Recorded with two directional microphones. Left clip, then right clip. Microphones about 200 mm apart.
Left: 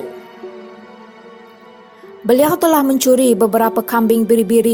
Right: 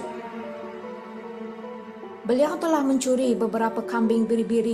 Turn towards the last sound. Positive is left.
turn(degrees=40)  # may be behind; listen again after turning